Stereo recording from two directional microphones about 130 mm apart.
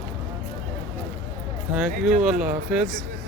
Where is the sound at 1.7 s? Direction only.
5° right (ahead or behind).